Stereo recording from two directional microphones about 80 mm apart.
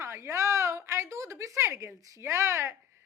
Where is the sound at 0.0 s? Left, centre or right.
Right.